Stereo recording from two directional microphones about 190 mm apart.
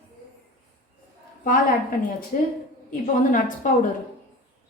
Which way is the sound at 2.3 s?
45° left (ahead or behind).